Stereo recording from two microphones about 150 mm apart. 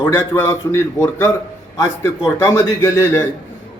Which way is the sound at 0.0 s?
15° left (ahead or behind).